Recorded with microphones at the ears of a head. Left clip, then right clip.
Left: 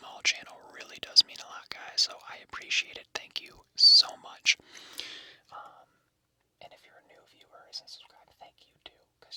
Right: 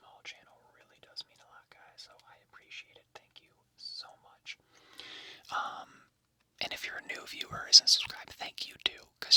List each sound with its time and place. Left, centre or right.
0.0 s whispering: left
5.5 s whispering: right